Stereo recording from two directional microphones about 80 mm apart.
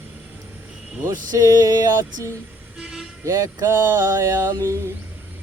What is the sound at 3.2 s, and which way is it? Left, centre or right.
Mantra, right.